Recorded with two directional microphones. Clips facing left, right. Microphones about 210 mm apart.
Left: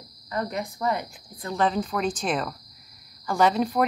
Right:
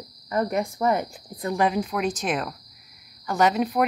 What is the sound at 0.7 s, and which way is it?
Speech, 25° right (ahead or behind).